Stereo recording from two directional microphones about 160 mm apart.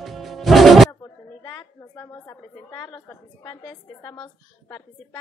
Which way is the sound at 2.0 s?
20° left (ahead or behind).